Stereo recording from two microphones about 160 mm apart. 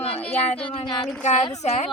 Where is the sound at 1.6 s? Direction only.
45° left (ahead or behind).